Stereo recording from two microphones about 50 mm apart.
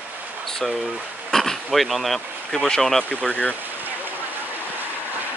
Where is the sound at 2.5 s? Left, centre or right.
Centre.